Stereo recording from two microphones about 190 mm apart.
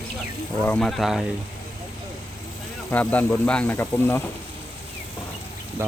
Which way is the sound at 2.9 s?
10° left (ahead or behind).